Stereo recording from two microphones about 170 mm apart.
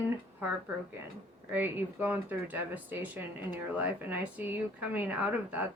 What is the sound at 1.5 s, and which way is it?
Speech, 10° right (ahead or behind).